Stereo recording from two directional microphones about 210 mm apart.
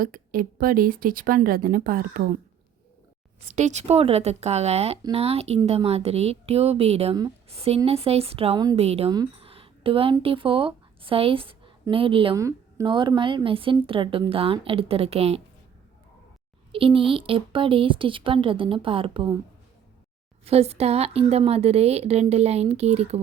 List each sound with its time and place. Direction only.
0.0 s speech: 45° right (ahead or behind)
3.4 s a woman's voice: 35° right (ahead or behind)
16.7 s a woman's voice: 25° right (ahead or behind)
20.4 s a woman's voice: 30° right (ahead or behind)